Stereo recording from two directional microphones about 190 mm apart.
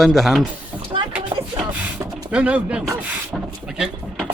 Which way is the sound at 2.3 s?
5° right (ahead or behind).